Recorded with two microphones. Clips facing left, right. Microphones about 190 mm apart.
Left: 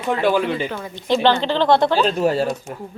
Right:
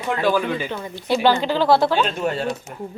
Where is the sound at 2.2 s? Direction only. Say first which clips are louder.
Left 5 dB; 35° left (ahead or behind).